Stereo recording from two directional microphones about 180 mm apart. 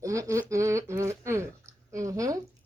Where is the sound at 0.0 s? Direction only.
15° right (ahead or behind).